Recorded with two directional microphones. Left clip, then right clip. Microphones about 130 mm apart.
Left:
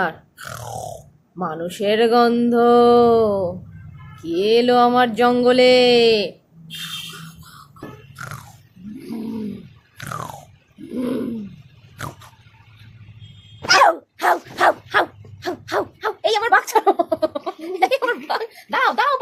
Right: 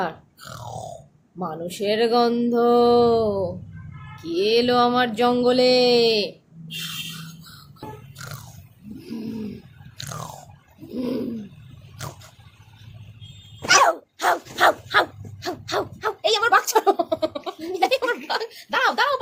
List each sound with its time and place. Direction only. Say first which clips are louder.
0.0 s grunt: left 5 dB; 40° left (ahead or behind)
1.4 s music: left 4 dB; 40° left (ahead or behind)
9.1 s a sound: left 3 dB; 40° left (ahead or behind)
13.6 s dog: left 2 dB; centre (ahead or behind)
13.8 s dog: left 4 dB; 45° left (ahead or behind)
18.3 s music: left 3 dB; 35° left (ahead or behind)